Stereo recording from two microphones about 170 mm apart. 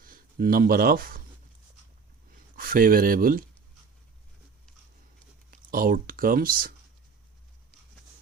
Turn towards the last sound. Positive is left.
turn(degrees=-55)  # may be behind; listen again after turning